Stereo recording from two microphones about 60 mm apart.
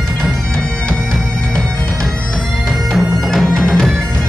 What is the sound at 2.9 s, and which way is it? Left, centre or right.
Bagpipes, centre.